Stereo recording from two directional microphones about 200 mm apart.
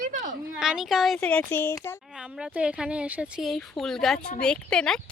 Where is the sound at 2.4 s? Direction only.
5° right (ahead or behind).